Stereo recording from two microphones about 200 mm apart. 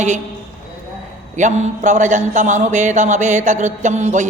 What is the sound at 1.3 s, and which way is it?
A man's voice, 35° right (ahead or behind).